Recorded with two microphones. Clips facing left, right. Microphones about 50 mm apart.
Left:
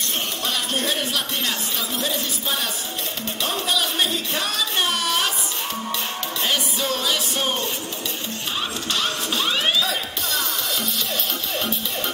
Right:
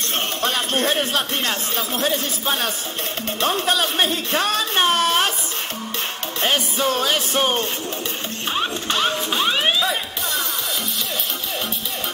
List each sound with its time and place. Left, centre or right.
0.4 s speech: right
6.4 s speech: right
8.5 s music: right